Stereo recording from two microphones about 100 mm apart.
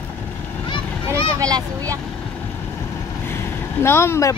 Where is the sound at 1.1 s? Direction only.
35° right (ahead or behind).